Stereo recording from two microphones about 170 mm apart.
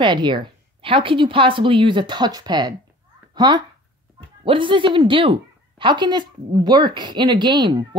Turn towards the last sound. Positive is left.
turn(degrees=-25)  # may be behind; listen again after turning